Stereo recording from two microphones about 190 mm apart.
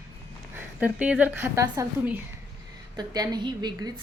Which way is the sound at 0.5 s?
10° right (ahead or behind).